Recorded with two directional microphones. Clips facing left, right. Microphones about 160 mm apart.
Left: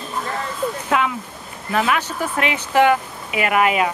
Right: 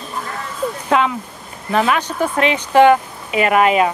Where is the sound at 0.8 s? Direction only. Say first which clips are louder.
Right 6 dB; 25° right (ahead or behind).